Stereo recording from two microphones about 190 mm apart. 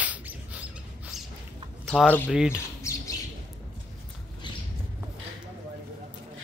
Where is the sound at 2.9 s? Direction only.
15° left (ahead or behind).